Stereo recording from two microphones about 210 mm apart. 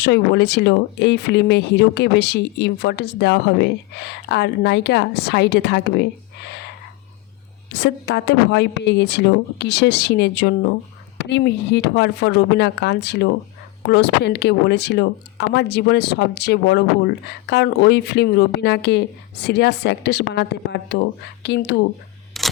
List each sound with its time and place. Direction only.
0.0 s speech: 55° left (ahead or behind)
7.7 s a woman's voice: 55° left (ahead or behind)
22.3 s camera: centre (ahead or behind)